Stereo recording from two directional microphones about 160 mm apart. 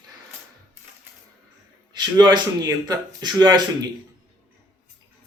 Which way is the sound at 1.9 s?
25° right (ahead or behind).